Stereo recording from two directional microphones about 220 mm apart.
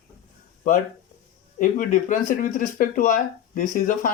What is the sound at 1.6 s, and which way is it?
Speech, 35° left (ahead or behind).